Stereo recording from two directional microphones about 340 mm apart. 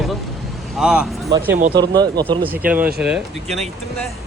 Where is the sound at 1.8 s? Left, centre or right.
Centre.